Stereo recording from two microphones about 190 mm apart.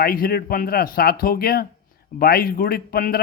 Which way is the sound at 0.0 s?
50° left (ahead or behind).